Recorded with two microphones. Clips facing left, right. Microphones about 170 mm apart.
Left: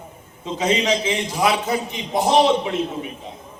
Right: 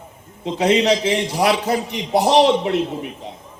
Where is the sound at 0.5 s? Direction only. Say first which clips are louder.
Right 4 dB; 65° right (ahead or behind).